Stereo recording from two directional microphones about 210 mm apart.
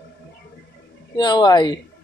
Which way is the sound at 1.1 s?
20° left (ahead or behind).